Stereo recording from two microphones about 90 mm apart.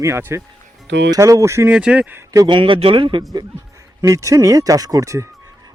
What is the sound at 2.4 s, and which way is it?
Speech, 65° right (ahead or behind).